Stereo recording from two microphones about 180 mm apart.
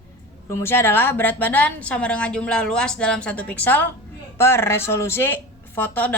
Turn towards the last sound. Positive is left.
turn(degrees=10)  # may be behind; listen again after turning